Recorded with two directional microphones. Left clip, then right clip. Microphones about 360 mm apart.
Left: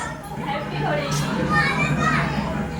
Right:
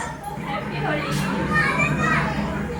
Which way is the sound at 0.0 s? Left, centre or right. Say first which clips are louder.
Even; centre.